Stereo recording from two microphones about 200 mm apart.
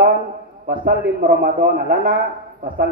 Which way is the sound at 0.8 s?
50° right (ahead or behind).